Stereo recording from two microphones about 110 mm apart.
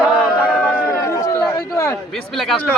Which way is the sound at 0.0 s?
10° right (ahead or behind).